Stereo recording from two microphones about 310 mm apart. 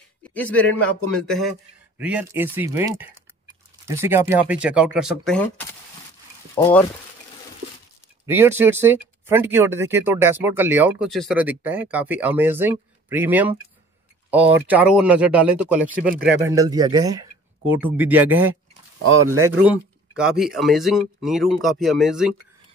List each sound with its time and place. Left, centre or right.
0.2 s a man's voice: centre
8.3 s speech: centre
16.0 s speech: right
16.3 s speech: centre
19.4 s speech: centre